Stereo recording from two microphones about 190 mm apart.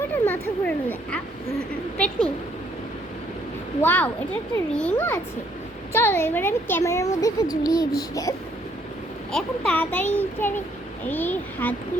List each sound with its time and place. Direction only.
0.3 s a woman's voice: 10° left (ahead or behind)
3.8 s a woman's voice: 10° left (ahead or behind)
9.3 s a woman's voice: 5° left (ahead or behind)